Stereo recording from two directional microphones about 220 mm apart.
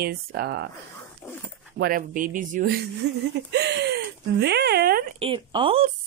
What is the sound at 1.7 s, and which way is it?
Speech, 40° right (ahead or behind).